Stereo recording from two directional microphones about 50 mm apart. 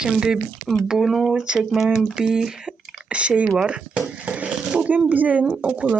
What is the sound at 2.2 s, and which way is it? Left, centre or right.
Speech, centre.